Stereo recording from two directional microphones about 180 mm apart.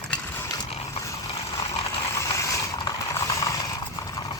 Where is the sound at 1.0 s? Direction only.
15° left (ahead or behind).